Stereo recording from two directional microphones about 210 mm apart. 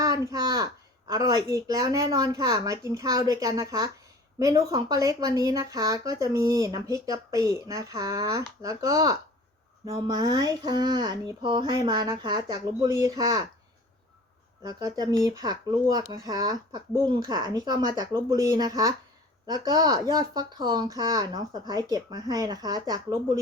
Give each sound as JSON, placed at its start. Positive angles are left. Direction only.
{"t": 0.0, "sound": "speech", "side_deg": -15}
{"t": 14.6, "sound": "speech", "side_deg": -20}